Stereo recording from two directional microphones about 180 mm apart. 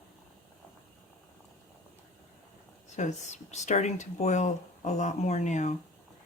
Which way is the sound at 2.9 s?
40° left (ahead or behind).